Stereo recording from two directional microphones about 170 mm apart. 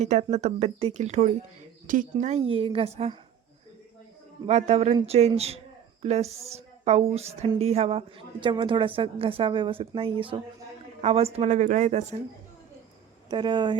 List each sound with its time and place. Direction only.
0.0 s a woman's voice: 40° right (ahead or behind)
4.4 s a woman's voice: 40° right (ahead or behind)
13.3 s speech: 25° right (ahead or behind)